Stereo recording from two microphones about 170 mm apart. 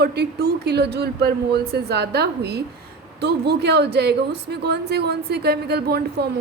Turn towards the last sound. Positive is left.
turn(degrees=-70)  # may be behind; listen again after turning